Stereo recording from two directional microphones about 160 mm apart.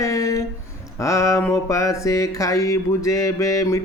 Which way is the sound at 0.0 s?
20° left (ahead or behind).